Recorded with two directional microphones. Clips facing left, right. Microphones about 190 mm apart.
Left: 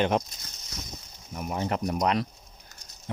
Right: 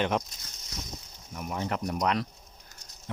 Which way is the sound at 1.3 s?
30° left (ahead or behind).